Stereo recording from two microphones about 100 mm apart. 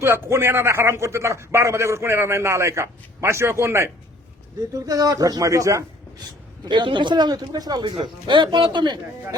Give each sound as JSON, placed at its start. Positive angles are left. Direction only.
{"t": 0.0, "sound": "a man's voice", "side_deg": -25}
{"t": 6.7, "sound": "speech", "side_deg": -50}